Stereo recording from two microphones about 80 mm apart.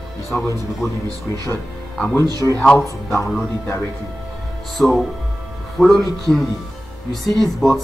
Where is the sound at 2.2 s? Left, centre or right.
Right.